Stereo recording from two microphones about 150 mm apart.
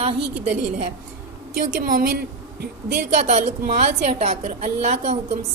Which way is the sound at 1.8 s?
75° right (ahead or behind).